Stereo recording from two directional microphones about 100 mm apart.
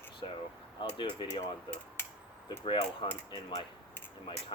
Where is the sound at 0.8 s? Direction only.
50° left (ahead or behind).